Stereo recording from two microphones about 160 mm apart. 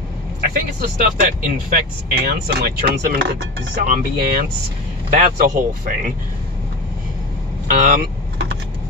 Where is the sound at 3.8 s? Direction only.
65° right (ahead or behind).